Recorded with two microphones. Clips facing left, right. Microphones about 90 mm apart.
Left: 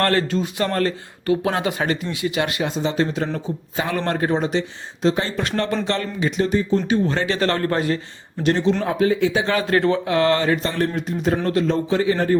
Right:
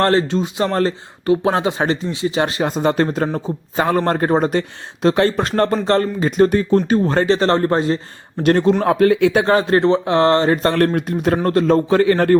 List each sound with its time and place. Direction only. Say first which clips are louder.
0.0 s speech: right 4 dB; 25° right (ahead or behind)
2.7 s speech: right 5 dB; 55° right (ahead or behind)
5.0 s a man's voice: right 5 dB; 60° right (ahead or behind)
5.4 s speech: right 5 dB; 40° right (ahead or behind)
8.4 s a man's voice: right 5 dB; 55° right (ahead or behind)
9.5 s speech: right 5 dB; 30° right (ahead or behind)
10.6 s a man's voice: right 7 dB; 65° right (ahead or behind)
11.4 s a man's voice: right 5 dB; 45° right (ahead or behind)